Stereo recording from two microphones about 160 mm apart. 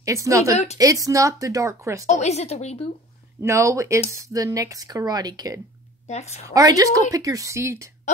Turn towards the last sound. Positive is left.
turn(degrees=-15)  # may be behind; listen again after turning